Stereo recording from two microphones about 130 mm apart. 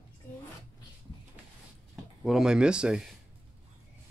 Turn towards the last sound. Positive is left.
turn(degrees=-5)  # may be behind; listen again after turning